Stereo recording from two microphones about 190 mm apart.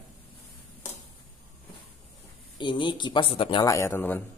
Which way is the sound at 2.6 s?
25° left (ahead or behind).